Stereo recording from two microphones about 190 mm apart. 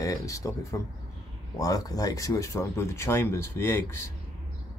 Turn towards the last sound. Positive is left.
turn(degrees=15)  # may be behind; listen again after turning